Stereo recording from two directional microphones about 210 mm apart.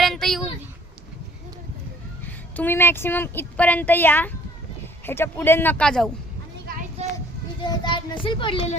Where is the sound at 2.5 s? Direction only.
10° left (ahead or behind).